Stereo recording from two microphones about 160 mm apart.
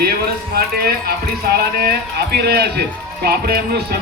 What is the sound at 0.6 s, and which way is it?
Speech, 70° right (ahead or behind).